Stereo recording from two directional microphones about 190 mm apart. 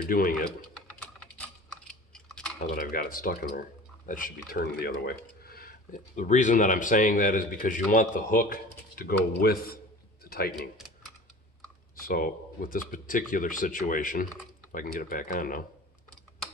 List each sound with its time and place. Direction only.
0.1 s speech: 50° left (ahead or behind)
2.1 s typing: 5° left (ahead or behind)
2.7 s speech: 50° left (ahead or behind)
12.1 s speech: 50° left (ahead or behind)